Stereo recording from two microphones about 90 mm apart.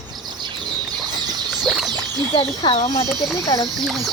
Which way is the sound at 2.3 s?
65° left (ahead or behind).